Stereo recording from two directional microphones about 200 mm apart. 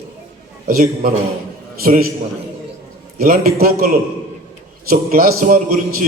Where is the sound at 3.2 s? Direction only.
45° right (ahead or behind).